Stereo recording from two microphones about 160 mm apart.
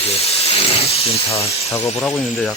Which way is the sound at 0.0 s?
40° left (ahead or behind).